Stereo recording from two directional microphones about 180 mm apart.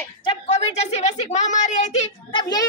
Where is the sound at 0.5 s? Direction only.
40° left (ahead or behind).